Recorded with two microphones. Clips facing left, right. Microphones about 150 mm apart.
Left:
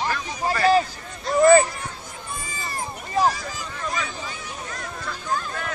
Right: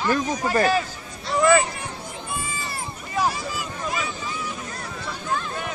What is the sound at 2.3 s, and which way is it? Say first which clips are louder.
Run: right 1 dB; 40° left (ahead or behind).